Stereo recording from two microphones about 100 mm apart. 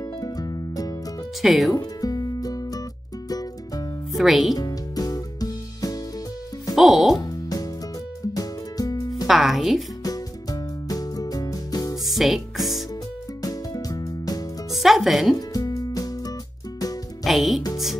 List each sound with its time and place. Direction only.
0.2 s music: 40° left (ahead or behind)
1.4 s speech: centre (ahead or behind)
1.8 s music: 40° left (ahead or behind)
4.2 s speech: centre (ahead or behind)
4.6 s music: 40° left (ahead or behind)
6.7 s music: centre (ahead or behind)
7.2 s music: 40° left (ahead or behind)
9.3 s speech: centre (ahead or behind)
10.0 s music: 40° left (ahead or behind)
12.1 s speech: centre (ahead or behind)
13.4 s music: 40° left (ahead or behind)
14.7 s speech: centre (ahead or behind)
15.3 s music: 35° left (ahead or behind)
17.2 s speech: centre (ahead or behind)